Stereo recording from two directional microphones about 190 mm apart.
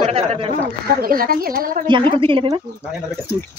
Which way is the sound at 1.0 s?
50° right (ahead or behind).